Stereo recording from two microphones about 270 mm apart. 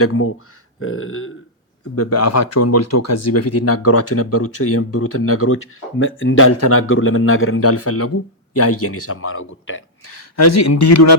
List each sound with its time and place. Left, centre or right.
0.0 s speech: left
2.0 s speech: left